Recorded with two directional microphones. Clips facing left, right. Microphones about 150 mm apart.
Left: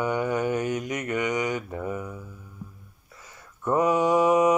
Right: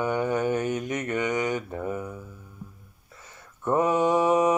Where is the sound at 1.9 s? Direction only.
30° right (ahead or behind).